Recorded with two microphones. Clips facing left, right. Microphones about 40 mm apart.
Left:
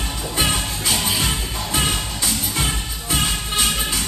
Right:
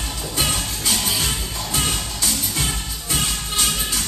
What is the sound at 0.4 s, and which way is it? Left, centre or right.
Music, centre.